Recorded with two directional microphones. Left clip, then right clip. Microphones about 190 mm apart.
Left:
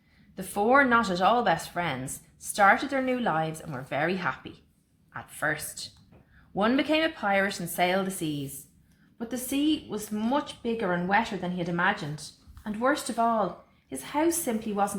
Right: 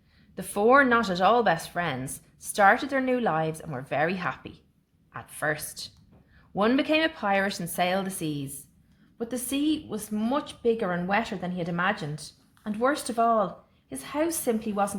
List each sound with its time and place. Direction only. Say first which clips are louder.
0.3 s a woman's voice: right 2 dB; 40° right (ahead or behind)